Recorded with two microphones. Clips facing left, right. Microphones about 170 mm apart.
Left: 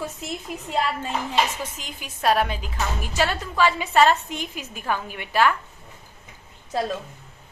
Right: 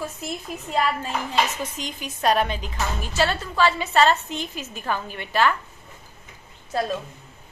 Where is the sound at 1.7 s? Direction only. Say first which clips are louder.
Right 4 dB; 5° left (ahead or behind).